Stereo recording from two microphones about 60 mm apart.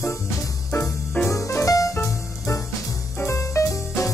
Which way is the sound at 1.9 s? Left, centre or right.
Left.